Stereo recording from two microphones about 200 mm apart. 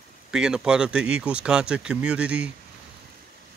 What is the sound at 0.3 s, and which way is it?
Speech, 5° right (ahead or behind).